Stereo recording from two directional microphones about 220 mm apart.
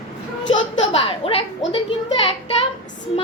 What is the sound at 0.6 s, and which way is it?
Speech, 25° left (ahead or behind).